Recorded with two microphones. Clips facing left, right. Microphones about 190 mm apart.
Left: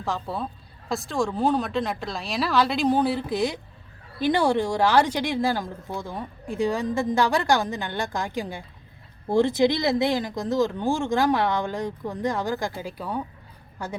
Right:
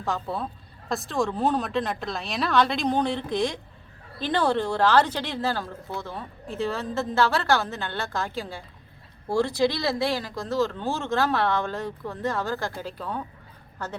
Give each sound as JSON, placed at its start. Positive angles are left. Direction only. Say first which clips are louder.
{"t": 0.0, "sound": "a woman's voice", "louder": "even", "side_deg": 0}